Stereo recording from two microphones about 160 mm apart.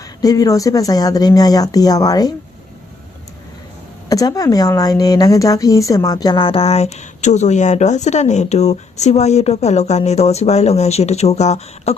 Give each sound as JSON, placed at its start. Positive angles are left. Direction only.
{"t": 0.0, "sound": "speech", "side_deg": 20}
{"t": 4.1, "sound": "a woman's voice", "side_deg": 20}